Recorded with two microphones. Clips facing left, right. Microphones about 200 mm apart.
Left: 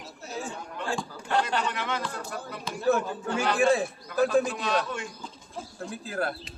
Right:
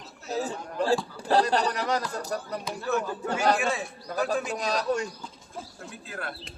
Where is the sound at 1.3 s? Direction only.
35° right (ahead or behind).